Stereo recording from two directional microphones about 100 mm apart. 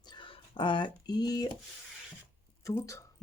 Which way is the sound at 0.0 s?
50° left (ahead or behind).